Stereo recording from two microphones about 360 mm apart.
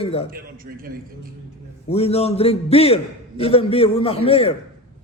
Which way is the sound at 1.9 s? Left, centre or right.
Centre.